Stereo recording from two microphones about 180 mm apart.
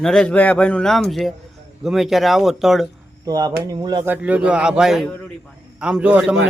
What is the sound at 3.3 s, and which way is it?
Speech, 20° right (ahead or behind).